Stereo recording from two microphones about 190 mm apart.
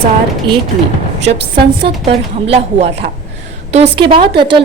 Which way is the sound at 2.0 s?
35° right (ahead or behind).